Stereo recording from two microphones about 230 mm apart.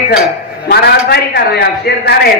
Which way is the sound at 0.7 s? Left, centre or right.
Left.